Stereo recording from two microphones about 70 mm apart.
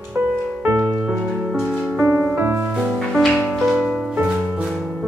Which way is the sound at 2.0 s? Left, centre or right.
Right.